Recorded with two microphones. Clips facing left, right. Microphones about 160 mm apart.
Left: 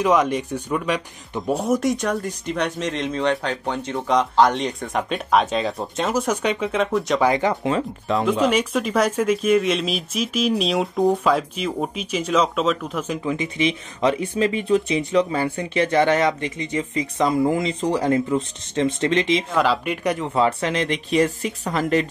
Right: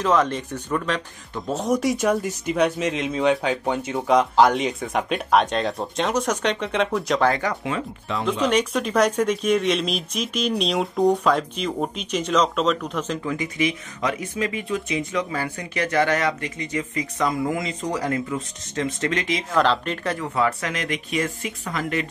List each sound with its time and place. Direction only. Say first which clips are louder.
0.0 s speech: left 2 dB; 15° left (ahead or behind)
1.7 s speech: right 3 dB; centre (ahead or behind)
7.2 s speech: left 3 dB; 15° left (ahead or behind)
7.6 s speech: left 5 dB; 40° left (ahead or behind)
8.3 s speech: even; 5° left (ahead or behind); by 19.4 s 25° left (ahead or behind)
19.5 s speech: even; 5° left (ahead or behind)
20.3 s speech: left 4 dB; 25° left (ahead or behind)